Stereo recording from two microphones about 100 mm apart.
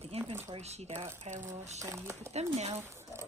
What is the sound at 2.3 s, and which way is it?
Speech, 90° right.